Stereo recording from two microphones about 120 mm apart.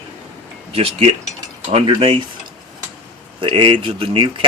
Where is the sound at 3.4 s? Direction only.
45° right (ahead or behind).